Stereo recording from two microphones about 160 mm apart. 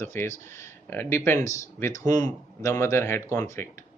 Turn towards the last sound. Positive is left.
turn(degrees=15)  # may be behind; listen again after turning